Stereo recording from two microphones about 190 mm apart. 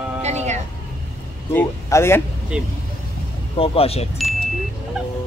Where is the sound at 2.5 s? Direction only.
5° right (ahead or behind).